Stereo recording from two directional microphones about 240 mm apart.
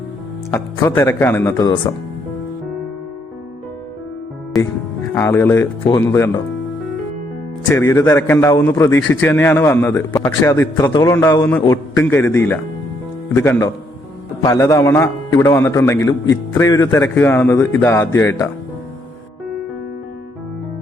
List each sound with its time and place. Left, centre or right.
0.5 s a man's voice: centre
5.1 s a man's voice: centre
7.7 s a man's voice: centre